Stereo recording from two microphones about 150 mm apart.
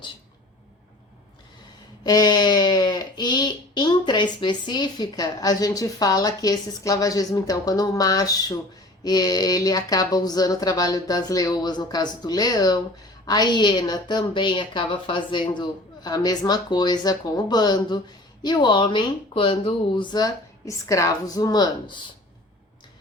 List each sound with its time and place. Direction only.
2.0 s speech: 25° left (ahead or behind)